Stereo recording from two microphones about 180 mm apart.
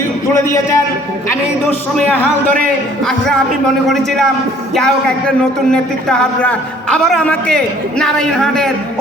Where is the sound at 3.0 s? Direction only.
5° left (ahead or behind).